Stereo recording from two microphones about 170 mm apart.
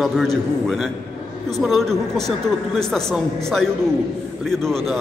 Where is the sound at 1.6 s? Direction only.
Centre (ahead or behind).